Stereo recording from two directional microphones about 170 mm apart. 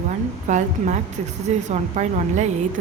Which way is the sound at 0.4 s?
45° right (ahead or behind).